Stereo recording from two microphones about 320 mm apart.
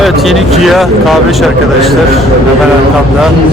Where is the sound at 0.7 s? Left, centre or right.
Centre.